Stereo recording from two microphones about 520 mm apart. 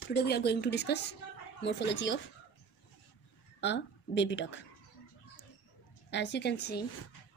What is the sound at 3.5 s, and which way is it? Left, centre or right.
Speech, centre.